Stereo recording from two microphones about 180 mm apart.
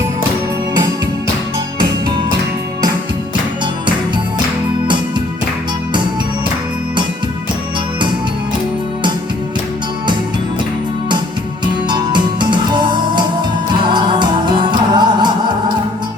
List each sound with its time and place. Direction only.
11.9 s music: 25° right (ahead or behind)